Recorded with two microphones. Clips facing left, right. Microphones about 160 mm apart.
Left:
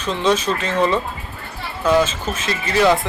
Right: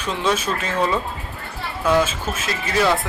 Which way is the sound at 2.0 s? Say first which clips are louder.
Left 2 dB; 10° right (ahead or behind).